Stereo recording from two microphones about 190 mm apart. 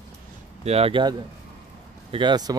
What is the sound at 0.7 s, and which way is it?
Speech, 30° right (ahead or behind).